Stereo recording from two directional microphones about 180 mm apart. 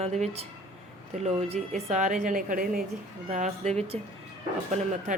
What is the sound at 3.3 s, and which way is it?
Speech, 40° right (ahead or behind).